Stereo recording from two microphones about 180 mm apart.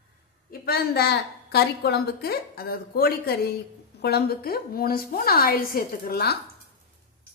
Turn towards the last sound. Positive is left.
turn(degrees=60)  # may be behind; listen again after turning